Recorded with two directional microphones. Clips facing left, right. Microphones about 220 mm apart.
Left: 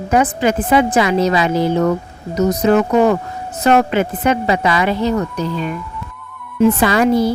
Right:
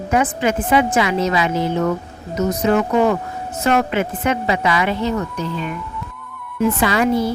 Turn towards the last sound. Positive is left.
turn(degrees=40)  # may be behind; listen again after turning